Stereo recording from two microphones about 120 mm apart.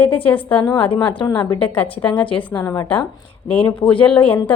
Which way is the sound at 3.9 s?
45° left (ahead or behind).